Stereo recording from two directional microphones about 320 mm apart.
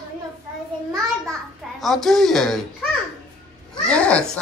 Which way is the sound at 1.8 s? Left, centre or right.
Centre.